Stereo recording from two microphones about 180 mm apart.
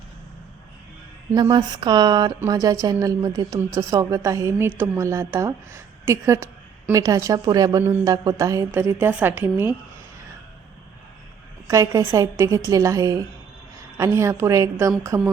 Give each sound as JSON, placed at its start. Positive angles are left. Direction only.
{"t": 1.3, "sound": "a woman's voice", "side_deg": -25}
{"t": 11.7, "sound": "a woman's voice", "side_deg": -20}